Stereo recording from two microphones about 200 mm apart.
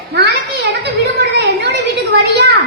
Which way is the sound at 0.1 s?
55° right (ahead or behind).